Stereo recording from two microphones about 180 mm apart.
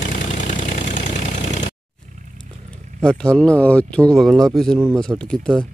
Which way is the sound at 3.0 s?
5° left (ahead or behind).